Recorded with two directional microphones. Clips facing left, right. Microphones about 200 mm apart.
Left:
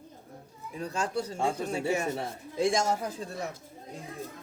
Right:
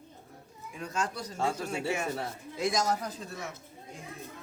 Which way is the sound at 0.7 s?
35° left (ahead or behind).